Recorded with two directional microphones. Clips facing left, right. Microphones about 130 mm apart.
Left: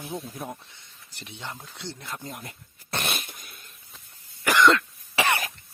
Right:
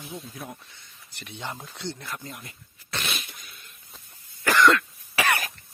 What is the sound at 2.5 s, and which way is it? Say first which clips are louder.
Dog: left 4 dB; 50° left (ahead or behind).